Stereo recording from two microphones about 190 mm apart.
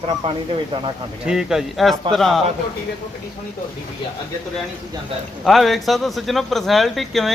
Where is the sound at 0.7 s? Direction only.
25° right (ahead or behind).